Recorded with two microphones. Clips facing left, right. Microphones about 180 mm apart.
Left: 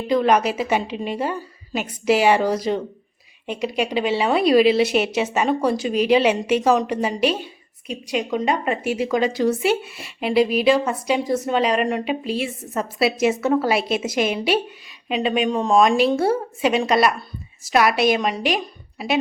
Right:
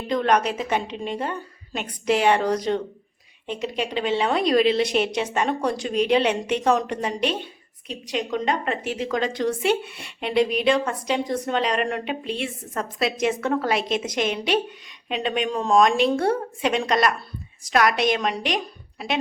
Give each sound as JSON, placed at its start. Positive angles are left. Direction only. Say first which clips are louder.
{"t": 0.1, "sound": "a woman's voice", "louder": "left 3 dB", "side_deg": 5}